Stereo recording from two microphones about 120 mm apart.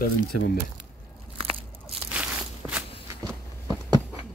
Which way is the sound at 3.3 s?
25° right (ahead or behind).